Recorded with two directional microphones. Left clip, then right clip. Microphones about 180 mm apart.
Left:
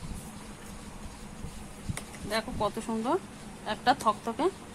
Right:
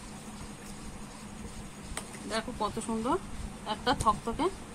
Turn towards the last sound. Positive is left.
turn(degrees=30)  # may be behind; listen again after turning